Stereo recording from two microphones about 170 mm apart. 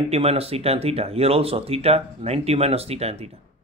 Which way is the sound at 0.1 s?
35° right (ahead or behind).